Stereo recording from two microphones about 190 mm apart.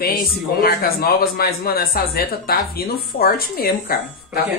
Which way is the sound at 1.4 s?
55° left (ahead or behind).